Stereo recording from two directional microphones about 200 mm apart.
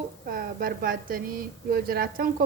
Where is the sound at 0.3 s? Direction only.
45° right (ahead or behind).